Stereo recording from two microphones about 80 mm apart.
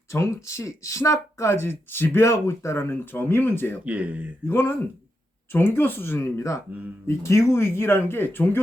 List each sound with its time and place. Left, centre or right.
0.1 s speech: left
3.8 s speech: centre
4.4 s speech: left